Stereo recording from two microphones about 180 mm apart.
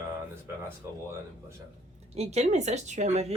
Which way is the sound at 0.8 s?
15° right (ahead or behind).